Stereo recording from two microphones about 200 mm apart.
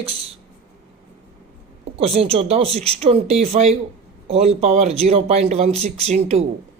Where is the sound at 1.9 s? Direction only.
30° right (ahead or behind).